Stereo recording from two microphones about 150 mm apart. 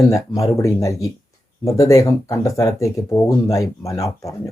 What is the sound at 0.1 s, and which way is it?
Speech, 20° left (ahead or behind).